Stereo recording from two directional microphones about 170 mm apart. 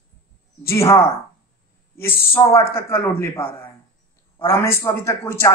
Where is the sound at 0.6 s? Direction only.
15° left (ahead or behind).